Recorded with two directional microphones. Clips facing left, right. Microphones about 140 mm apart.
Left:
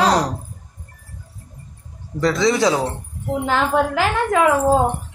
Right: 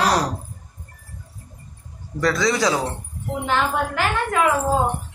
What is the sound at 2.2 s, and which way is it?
Speech, 25° left (ahead or behind).